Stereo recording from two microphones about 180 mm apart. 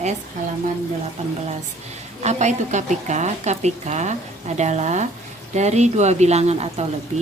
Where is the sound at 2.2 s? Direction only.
40° right (ahead or behind).